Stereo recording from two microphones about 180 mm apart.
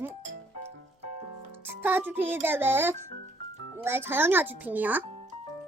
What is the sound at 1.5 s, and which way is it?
A child's voice, 10° right (ahead or behind).